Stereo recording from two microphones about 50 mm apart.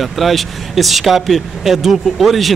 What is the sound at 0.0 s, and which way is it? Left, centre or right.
Speech, centre.